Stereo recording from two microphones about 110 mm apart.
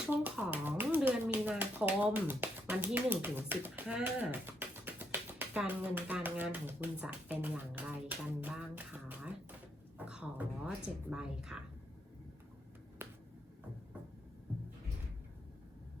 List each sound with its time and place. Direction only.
0.1 s speech: 15° right (ahead or behind)
7.7 s a sound: 15° right (ahead or behind)
10.8 s speech: 5° right (ahead or behind)
13.0 s finger snapping: 20° right (ahead or behind)